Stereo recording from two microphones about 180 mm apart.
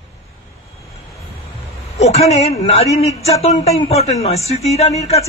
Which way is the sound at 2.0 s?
35° left (ahead or behind).